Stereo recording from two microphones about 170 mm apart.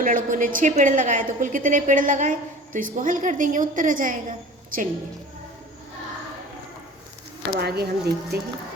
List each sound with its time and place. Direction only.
0.0 s a woman's voice: 50° right (ahead or behind)
7.6 s speech: 70° right (ahead or behind)